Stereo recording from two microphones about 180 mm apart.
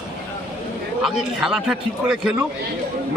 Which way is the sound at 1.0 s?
Centre (ahead or behind).